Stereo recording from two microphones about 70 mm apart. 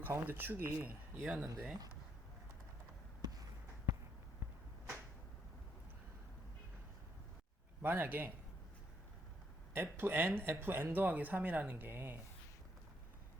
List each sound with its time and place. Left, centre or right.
0.0 s speech: right
1.2 s speech: centre
3.2 s basketball bounce: right
7.8 s speech: right
9.7 s speech: right